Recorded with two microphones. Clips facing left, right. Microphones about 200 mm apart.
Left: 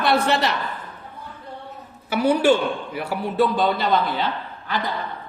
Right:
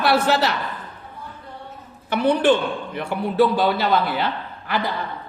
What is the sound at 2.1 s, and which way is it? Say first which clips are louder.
A man's voice: even; 5° left (ahead or behind).